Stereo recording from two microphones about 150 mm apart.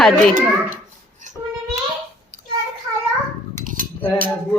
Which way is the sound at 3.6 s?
60° right (ahead or behind).